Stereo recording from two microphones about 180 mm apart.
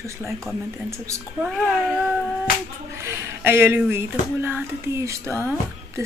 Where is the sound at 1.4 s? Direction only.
5° right (ahead or behind).